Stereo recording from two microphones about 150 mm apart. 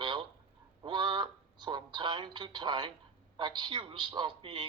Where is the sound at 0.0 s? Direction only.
30° right (ahead or behind).